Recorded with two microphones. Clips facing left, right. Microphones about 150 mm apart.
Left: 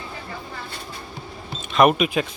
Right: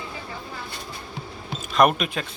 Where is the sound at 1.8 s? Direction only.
5° left (ahead or behind).